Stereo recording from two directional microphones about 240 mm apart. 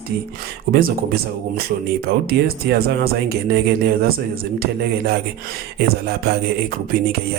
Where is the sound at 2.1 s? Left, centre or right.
Right.